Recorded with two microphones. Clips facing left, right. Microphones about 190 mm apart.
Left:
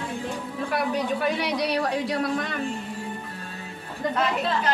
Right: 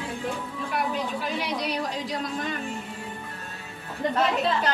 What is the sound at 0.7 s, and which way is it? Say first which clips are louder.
Speech: left 3 dB; 70° left (ahead or behind).